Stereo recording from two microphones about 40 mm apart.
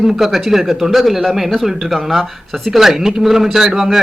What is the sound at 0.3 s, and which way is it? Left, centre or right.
Speech, centre.